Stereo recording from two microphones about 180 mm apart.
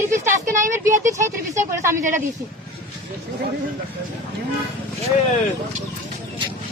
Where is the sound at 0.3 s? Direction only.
45° right (ahead or behind).